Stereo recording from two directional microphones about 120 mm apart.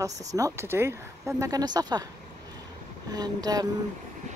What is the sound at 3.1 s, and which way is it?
Speech, 35° right (ahead or behind).